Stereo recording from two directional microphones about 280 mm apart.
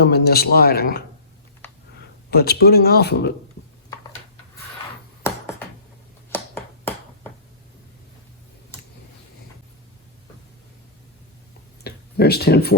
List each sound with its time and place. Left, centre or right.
0.0 s speech: left
2.3 s speech: left
6.3 s finger snapping: centre
11.8 s a sound: left